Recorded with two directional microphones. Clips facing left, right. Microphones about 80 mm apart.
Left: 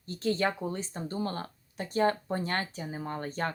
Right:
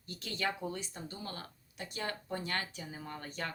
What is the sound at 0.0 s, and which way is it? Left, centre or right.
Speech, left.